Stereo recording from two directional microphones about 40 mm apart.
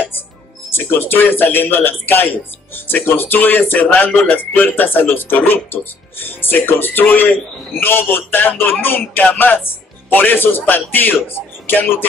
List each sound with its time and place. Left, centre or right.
0.7 s speech: left
2.7 s speech: left
9.2 s speech: left
9.7 s speech: left